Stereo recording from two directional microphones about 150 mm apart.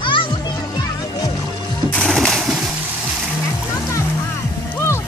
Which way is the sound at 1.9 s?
5° left (ahead or behind).